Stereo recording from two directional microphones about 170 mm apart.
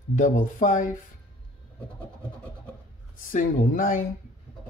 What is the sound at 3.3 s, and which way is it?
Speech, 55° left (ahead or behind).